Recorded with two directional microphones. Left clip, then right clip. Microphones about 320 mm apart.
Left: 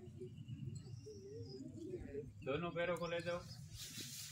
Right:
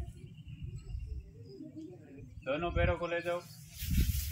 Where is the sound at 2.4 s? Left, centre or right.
Centre.